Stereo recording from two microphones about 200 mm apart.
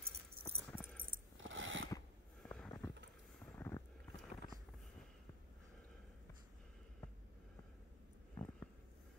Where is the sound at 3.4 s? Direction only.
10° left (ahead or behind).